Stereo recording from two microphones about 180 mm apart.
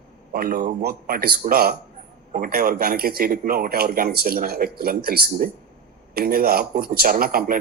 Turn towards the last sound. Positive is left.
turn(degrees=-55)  # may be behind; listen again after turning